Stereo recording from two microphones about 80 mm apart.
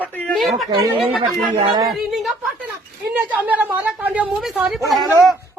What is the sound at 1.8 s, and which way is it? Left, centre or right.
Speech, centre.